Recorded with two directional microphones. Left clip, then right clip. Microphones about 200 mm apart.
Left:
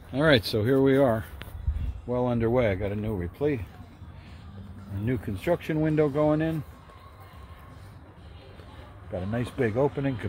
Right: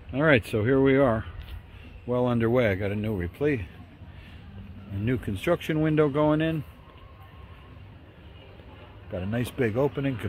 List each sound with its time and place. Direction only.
0.1 s speech: centre (ahead or behind)
2.0 s speech: 20° right (ahead or behind)
5.0 s speech: 20° right (ahead or behind)
9.1 s speech: 10° right (ahead or behind)